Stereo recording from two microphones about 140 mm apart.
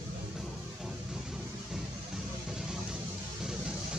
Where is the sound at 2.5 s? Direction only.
5° right (ahead or behind).